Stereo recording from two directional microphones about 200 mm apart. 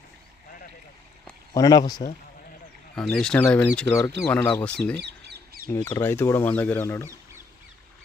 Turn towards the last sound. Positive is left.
turn(degrees=10)  # may be behind; listen again after turning